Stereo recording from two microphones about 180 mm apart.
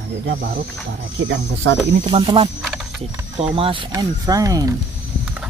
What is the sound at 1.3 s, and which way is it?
Speech, 90° right.